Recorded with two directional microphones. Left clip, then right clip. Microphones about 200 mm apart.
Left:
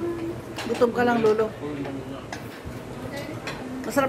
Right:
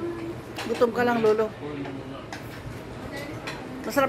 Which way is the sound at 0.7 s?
15° right (ahead or behind).